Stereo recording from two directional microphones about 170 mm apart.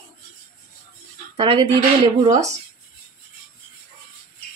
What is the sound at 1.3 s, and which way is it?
Speech, 30° right (ahead or behind).